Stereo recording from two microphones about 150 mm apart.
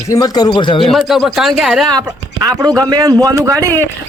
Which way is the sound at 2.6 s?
25° right (ahead or behind).